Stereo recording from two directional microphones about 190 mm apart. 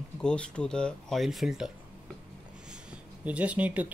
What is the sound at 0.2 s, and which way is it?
Speech, 5° left (ahead or behind).